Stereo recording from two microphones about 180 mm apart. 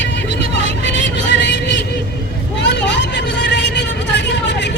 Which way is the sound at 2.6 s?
75° left (ahead or behind).